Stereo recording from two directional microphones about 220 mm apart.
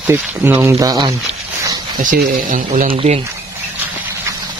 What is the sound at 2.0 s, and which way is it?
Speech, 40° right (ahead or behind).